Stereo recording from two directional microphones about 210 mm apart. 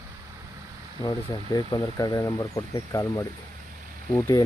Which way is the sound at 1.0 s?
20° left (ahead or behind).